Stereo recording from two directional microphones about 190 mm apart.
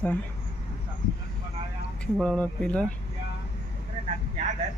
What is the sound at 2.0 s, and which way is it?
Speech, 5° left (ahead or behind).